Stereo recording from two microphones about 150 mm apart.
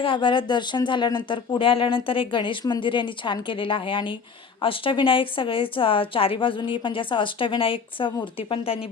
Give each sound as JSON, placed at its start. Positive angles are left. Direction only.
{"t": 0.0, "sound": "a woman's voice", "side_deg": 35}